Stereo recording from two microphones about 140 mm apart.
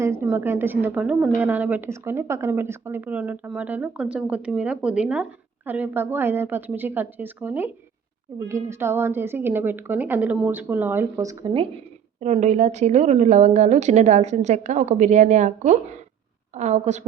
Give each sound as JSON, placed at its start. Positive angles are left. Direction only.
{"t": 0.0, "sound": "a woman's voice", "side_deg": -20}
{"t": 12.2, "sound": "a woman's voice", "side_deg": -55}